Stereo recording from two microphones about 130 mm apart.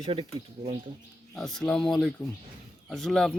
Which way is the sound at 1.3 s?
5° left (ahead or behind).